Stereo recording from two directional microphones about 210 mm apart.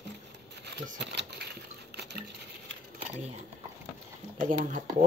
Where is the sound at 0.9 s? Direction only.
55° right (ahead or behind).